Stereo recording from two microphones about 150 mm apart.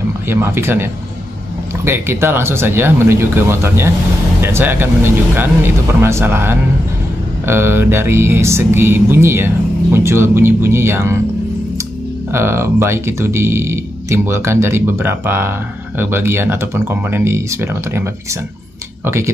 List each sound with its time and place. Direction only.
0.3 s speech: 15° right (ahead or behind)
1.9 s speech: 15° right (ahead or behind)
12.3 s speech: 15° right (ahead or behind)
19.0 s speech: 15° right (ahead or behind)